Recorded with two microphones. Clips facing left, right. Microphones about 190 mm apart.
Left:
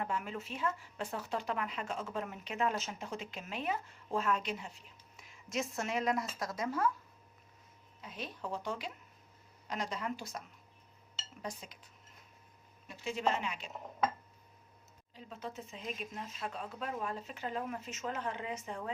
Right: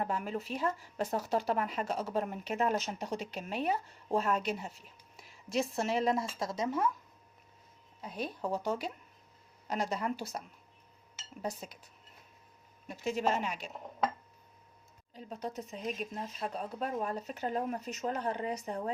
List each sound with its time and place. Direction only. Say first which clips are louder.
0.0 s speech: right 3 dB; 40° right (ahead or behind); by 6.9 s 20° right (ahead or behind)
8.0 s speech: right 6 dB; 40° right (ahead or behind)
12.9 s speech: right 3 dB; 40° right (ahead or behind)
15.1 s speech: right 5 dB; 40° right (ahead or behind)